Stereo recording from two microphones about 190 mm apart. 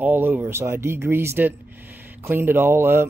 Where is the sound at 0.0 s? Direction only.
10° right (ahead or behind).